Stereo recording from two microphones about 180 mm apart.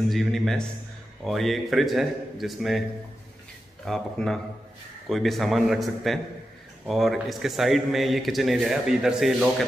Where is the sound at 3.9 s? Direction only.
5° left (ahead or behind).